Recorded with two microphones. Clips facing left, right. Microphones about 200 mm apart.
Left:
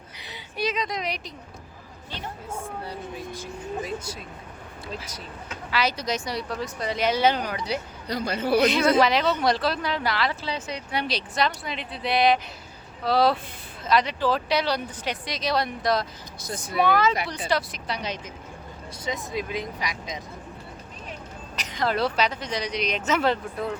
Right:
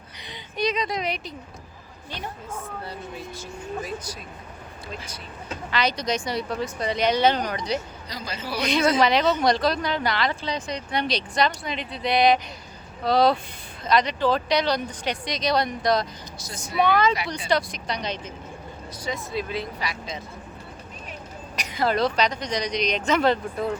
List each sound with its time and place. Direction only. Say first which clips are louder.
0.2 s a sound: right 2 dB; 5° left (ahead or behind)
2.5 s speech: left 1 dB; 10° left (ahead or behind)
3.8 s speech: left 1 dB; 25° left (ahead or behind)
5.7 s speech: right 1 dB; 5° left (ahead or behind)
8.0 s a man's voice: left 7 dB; 60° left (ahead or behind)
9.0 s speech: right 1 dB; centre (ahead or behind)
16.4 s a man's voice: left 6 dB; 55° left (ahead or behind)
16.7 s speech: right 1 dB; centre (ahead or behind)
21.5 s a sound: right 2 dB; 10° right (ahead or behind)
21.9 s speech: right 2 dB; 5° left (ahead or behind)